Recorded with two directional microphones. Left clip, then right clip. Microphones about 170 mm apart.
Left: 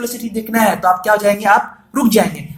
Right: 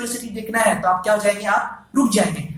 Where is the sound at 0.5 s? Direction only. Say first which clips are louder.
Left 4 dB; 45° left (ahead or behind).